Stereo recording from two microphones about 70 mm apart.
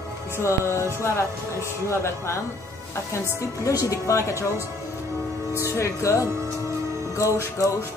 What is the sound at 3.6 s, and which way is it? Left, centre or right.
Music, left.